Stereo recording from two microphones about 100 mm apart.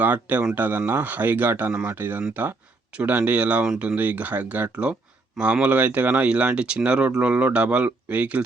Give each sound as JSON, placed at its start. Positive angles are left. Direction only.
{"t": 0.0, "sound": "speech", "side_deg": -15}